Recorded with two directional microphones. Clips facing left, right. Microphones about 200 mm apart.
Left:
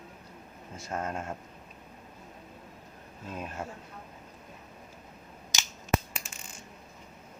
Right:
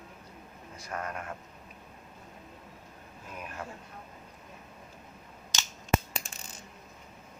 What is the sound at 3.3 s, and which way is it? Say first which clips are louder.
Speech: left 3 dB; 25° left (ahead or behind).